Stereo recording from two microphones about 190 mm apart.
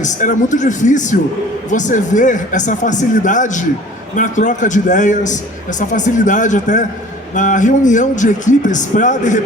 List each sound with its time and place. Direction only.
0.0 s a man's voice: 40° left (ahead or behind)